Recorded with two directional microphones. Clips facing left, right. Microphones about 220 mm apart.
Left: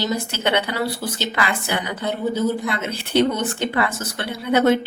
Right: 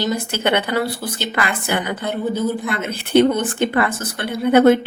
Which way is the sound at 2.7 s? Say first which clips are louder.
Right 4 dB; 55° right (ahead or behind).